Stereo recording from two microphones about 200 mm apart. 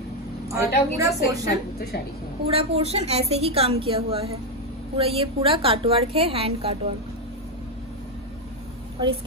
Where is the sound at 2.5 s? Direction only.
30° right (ahead or behind).